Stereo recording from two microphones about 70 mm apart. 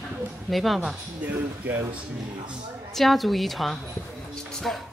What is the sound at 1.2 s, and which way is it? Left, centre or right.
Speech, right.